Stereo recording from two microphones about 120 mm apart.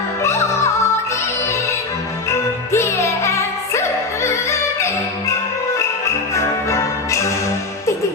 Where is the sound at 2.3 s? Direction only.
20° left (ahead or behind).